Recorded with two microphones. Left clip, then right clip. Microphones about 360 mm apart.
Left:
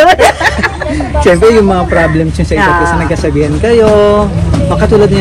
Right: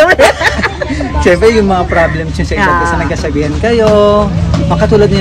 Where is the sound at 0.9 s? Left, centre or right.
Right.